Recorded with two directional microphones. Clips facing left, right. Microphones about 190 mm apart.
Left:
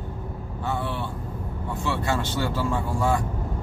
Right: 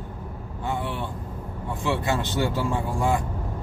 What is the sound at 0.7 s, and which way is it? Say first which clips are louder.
Speech: even; 15° right (ahead or behind).